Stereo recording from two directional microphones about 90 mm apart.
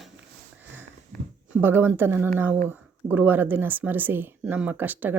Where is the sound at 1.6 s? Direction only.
25° right (ahead or behind).